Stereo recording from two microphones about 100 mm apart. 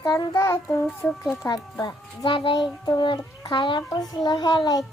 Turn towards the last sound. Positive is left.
turn(degrees=45)  # may be behind; listen again after turning